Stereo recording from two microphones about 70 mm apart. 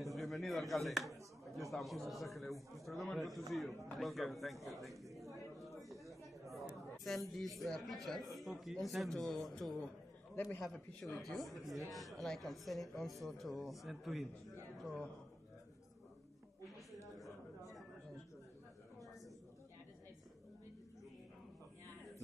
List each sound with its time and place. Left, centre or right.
0.0 s a sound: centre
2.0 s speech: centre
5.8 s a sound: centre
7.1 s speech: centre
10.3 s a man's voice: left
10.6 s speech: centre